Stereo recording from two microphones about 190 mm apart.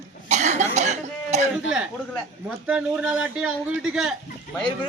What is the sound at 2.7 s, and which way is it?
A man's voice, 5° right (ahead or behind).